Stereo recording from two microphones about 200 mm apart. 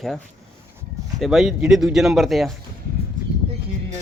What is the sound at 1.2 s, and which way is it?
Speech, centre (ahead or behind).